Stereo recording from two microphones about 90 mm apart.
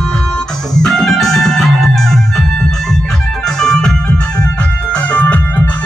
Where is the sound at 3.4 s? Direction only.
5° left (ahead or behind).